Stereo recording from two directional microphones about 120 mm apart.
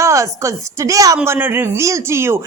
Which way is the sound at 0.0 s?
25° right (ahead or behind).